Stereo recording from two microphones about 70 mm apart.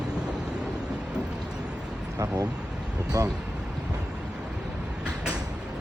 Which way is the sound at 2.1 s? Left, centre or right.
Right.